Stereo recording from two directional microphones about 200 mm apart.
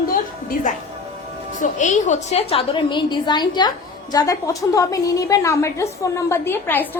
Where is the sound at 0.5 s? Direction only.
40° left (ahead or behind).